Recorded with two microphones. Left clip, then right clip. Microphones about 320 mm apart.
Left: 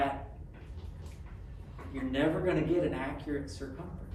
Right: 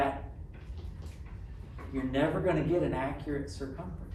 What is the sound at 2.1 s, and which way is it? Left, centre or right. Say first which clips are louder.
Speech: right 1 dB; centre.